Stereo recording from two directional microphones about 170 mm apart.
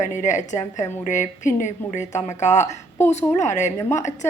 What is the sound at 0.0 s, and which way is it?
A woman's voice, 45° left (ahead or behind).